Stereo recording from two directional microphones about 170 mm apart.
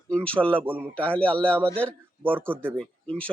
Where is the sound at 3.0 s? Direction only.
5° left (ahead or behind).